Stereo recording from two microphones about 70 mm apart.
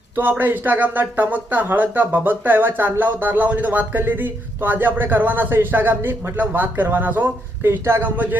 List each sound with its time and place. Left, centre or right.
0.2 s speech: right
8.0 s speech: right